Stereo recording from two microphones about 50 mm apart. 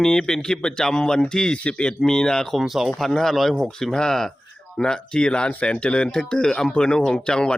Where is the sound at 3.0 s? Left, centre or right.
Centre.